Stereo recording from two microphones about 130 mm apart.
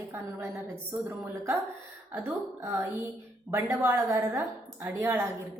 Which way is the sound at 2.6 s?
20° right (ahead or behind).